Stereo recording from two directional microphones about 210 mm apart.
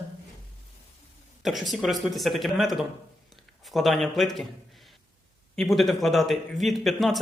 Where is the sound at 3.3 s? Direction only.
Centre (ahead or behind).